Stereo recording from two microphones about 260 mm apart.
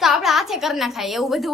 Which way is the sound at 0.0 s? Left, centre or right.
Centre.